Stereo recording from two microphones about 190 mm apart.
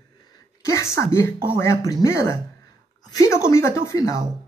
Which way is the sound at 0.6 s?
15° left (ahead or behind).